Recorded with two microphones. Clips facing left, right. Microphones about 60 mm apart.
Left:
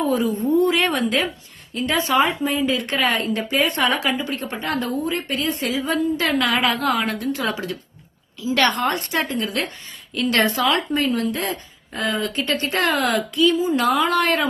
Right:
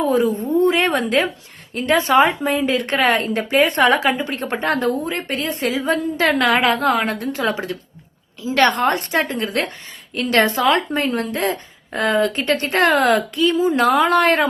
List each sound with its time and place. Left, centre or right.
0.0 s a woman's voice: right
0.6 s a woman's voice: right